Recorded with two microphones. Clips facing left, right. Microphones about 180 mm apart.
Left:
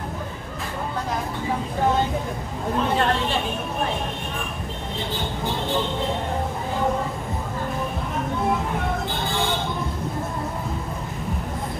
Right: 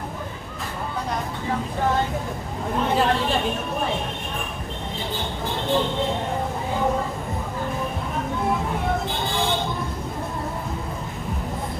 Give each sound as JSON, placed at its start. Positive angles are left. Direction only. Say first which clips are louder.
{"t": 2.9, "sound": "a woman's voice", "louder": "right 3 dB", "side_deg": 0}